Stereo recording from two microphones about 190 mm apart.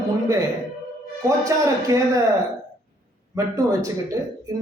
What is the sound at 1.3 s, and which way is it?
Speech, 15° right (ahead or behind).